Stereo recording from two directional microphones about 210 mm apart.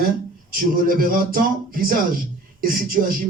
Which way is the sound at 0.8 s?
40° right (ahead or behind).